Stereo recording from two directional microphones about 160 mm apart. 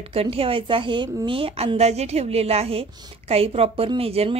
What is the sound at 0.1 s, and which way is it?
A woman's voice, 35° right (ahead or behind).